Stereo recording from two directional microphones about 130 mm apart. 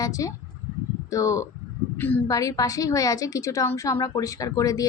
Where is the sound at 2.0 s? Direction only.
15° left (ahead or behind).